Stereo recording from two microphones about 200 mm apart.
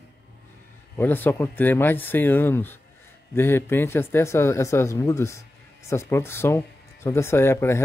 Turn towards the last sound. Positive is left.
turn(degrees=10)  # may be behind; listen again after turning